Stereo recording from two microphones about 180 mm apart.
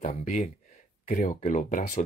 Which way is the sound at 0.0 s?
40° left (ahead or behind).